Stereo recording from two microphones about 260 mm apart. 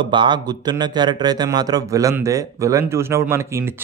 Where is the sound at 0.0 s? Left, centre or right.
Centre.